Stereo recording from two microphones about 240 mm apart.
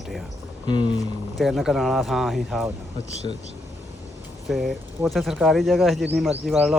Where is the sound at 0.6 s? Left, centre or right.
Centre.